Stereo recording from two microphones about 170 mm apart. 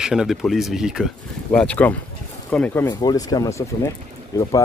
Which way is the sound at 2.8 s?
20° left (ahead or behind).